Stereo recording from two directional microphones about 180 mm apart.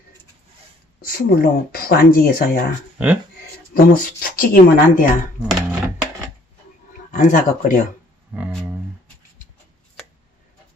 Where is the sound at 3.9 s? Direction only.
55° left (ahead or behind).